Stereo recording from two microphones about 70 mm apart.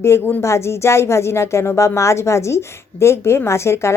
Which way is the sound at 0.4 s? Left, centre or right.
Left.